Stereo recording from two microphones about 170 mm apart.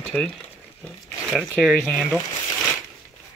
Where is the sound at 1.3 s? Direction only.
Centre (ahead or behind).